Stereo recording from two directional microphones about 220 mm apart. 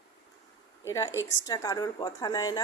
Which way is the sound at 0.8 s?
15° left (ahead or behind).